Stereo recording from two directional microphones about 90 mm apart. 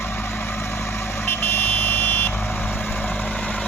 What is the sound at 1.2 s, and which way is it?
Vehicle, 25° left (ahead or behind).